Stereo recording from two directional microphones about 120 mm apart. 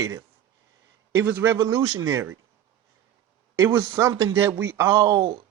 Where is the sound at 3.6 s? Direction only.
20° right (ahead or behind).